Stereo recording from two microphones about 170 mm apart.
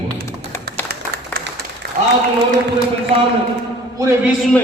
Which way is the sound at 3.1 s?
35° right (ahead or behind).